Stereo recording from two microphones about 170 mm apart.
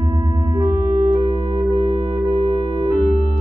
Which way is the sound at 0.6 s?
25° right (ahead or behind).